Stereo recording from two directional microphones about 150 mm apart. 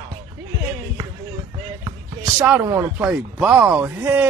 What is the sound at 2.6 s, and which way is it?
A man's voice, 15° right (ahead or behind).